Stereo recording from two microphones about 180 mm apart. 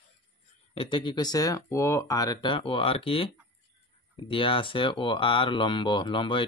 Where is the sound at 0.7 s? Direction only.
25° left (ahead or behind).